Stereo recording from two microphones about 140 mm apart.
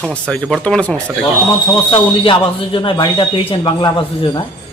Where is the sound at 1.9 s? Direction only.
40° left (ahead or behind).